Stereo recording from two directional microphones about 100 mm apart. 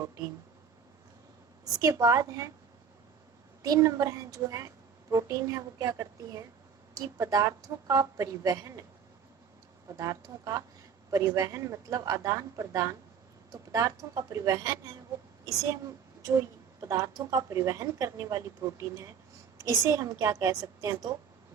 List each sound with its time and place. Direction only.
1.6 s speech: 35° right (ahead or behind)
3.6 s speech: 35° right (ahead or behind)
9.9 s speech: 35° right (ahead or behind)
16.8 s speech: 35° right (ahead or behind)